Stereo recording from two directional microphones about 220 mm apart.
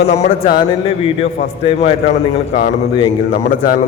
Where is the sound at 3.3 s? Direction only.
40° left (ahead or behind).